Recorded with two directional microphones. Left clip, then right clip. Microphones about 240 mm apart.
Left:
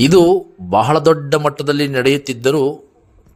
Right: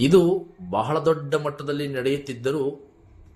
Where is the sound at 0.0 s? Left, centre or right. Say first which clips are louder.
Left 8 dB; left.